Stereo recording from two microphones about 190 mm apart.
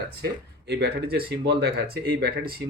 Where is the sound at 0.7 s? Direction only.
60° right (ahead or behind).